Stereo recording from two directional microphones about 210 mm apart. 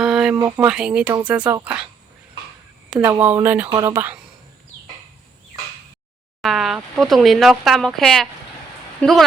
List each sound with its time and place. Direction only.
0.0 s a sound: centre (ahead or behind)
0.3 s speech: 10° right (ahead or behind)
2.9 s speech: 5° right (ahead or behind)
6.4 s a woman's voice: centre (ahead or behind)